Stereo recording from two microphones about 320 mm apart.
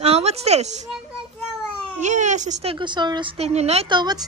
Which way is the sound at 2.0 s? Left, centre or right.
Right.